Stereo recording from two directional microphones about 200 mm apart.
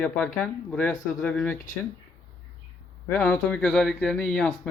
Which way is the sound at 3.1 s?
5° left (ahead or behind).